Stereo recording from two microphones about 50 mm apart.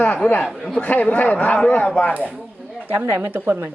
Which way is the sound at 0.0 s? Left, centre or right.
Left.